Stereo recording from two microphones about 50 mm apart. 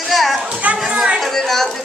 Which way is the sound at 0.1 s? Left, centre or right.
Centre.